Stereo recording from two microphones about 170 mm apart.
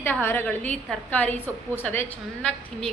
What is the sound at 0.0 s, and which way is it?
A woman's voice, 15° left (ahead or behind).